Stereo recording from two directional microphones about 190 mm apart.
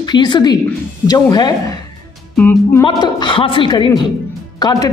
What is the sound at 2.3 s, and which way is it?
Music, 10° left (ahead or behind).